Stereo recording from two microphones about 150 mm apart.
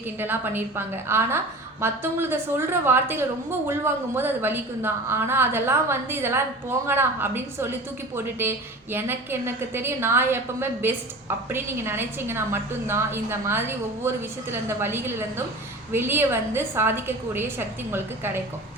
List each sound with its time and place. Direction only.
0.2 s a woman's voice: 15° right (ahead or behind)